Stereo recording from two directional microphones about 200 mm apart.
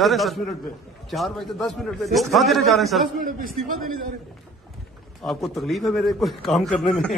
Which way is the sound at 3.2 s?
45° right (ahead or behind).